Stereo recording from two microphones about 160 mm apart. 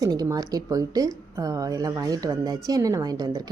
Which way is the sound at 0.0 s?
20° right (ahead or behind).